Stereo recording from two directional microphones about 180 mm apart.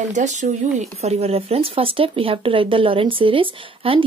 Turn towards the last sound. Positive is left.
turn(degrees=-30)  # may be behind; listen again after turning